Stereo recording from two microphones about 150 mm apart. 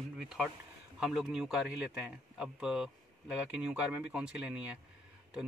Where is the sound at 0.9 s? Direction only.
5° right (ahead or behind).